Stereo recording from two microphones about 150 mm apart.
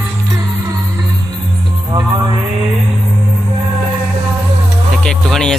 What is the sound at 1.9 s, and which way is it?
Music, 25° right (ahead or behind).